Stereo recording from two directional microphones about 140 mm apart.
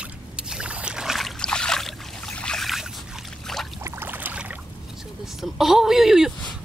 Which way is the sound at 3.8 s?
15° right (ahead or behind).